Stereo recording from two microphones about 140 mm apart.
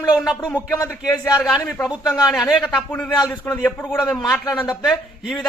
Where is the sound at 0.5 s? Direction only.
15° left (ahead or behind).